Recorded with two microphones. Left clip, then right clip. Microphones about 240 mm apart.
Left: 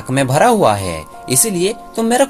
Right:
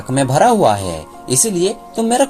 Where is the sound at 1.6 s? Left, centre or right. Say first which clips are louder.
Even; left.